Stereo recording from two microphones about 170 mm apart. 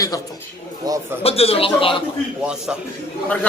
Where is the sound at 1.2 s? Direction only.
35° left (ahead or behind).